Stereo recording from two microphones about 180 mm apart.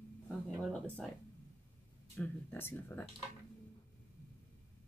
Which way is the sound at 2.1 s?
10° left (ahead or behind).